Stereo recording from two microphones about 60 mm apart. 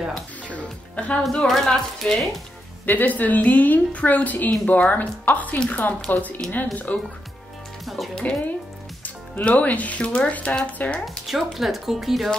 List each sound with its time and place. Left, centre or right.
0.9 s speech: left
1.5 s speech: centre
2.9 s speech: left
7.8 s speech: centre
8.1 s speech: centre
11.2 s speech: centre